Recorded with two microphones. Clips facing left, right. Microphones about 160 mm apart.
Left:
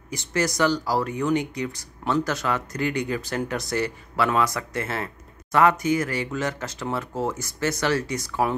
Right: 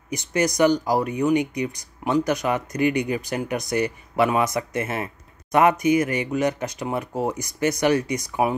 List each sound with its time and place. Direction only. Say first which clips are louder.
0.1 s speech: right 3 dB; 20° right (ahead or behind)